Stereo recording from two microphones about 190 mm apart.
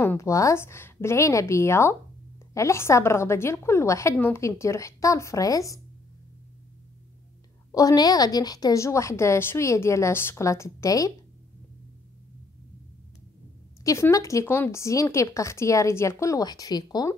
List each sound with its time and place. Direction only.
0.0 s a woman's voice: 15° left (ahead or behind)
7.7 s a woman's voice: 20° left (ahead or behind)
13.8 s a woman's voice: 15° left (ahead or behind)